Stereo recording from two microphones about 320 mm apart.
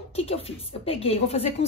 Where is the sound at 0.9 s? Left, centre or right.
Centre.